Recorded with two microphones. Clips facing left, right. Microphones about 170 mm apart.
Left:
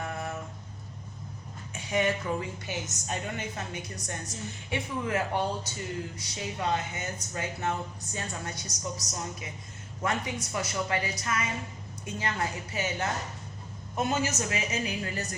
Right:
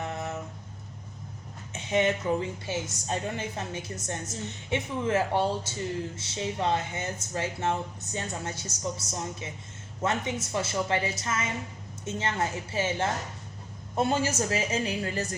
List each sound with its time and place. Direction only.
1.7 s a woman's voice: 25° right (ahead or behind)